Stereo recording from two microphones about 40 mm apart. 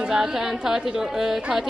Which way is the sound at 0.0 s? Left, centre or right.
Right.